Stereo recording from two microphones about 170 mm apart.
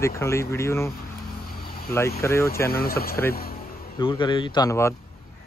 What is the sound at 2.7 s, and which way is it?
Speech, 60° left (ahead or behind).